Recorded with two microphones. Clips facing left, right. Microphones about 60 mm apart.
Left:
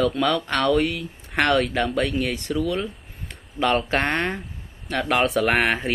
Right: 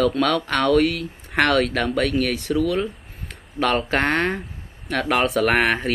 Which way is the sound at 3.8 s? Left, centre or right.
Centre.